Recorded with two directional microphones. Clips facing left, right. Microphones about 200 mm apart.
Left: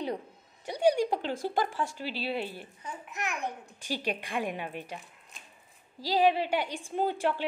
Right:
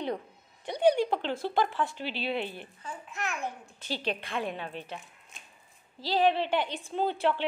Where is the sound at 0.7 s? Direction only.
10° left (ahead or behind).